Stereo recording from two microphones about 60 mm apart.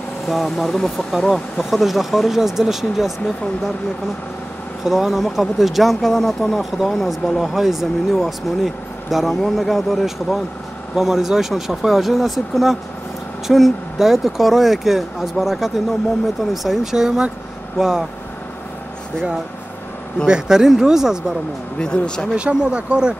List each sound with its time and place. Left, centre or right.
0.3 s speech: centre
0.7 s speech: centre
4.8 s speech: centre
20.2 s speech: centre
21.7 s speech: centre
22.3 s speech: centre